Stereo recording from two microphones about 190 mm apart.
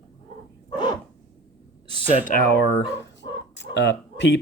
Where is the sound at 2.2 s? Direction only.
50° left (ahead or behind).